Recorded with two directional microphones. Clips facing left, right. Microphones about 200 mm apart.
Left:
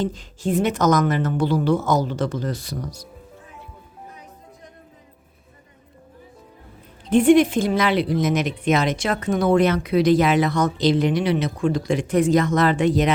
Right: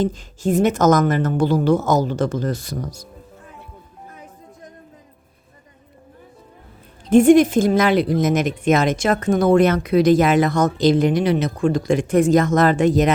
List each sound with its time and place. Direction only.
0.0 s a woman's voice: 45° right (ahead or behind)
7.1 s a woman's voice: 45° right (ahead or behind)